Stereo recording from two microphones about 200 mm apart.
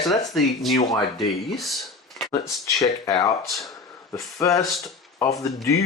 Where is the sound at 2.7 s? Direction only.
15° left (ahead or behind).